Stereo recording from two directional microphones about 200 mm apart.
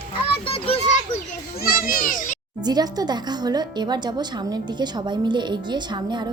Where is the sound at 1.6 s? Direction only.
45° left (ahead or behind).